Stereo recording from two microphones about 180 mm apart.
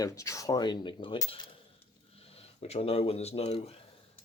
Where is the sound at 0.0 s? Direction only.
15° left (ahead or behind); by 3.8 s 35° left (ahead or behind).